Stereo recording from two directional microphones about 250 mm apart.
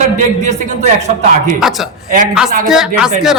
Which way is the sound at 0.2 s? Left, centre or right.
Right.